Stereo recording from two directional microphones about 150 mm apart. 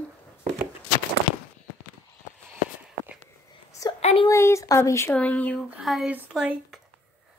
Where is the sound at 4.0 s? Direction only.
45° left (ahead or behind).